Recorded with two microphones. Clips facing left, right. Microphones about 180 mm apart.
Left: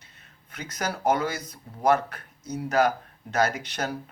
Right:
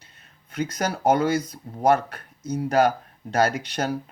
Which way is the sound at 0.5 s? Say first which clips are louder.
Right 6 dB; 35° right (ahead or behind).